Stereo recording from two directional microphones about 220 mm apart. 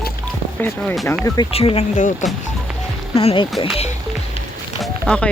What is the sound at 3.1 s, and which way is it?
Speech, 25° left (ahead or behind).